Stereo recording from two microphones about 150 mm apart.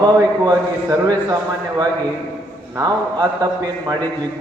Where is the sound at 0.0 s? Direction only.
25° right (ahead or behind).